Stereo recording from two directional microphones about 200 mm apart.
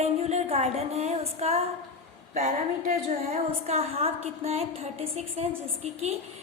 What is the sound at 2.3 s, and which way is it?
Speech, 45° right (ahead or behind).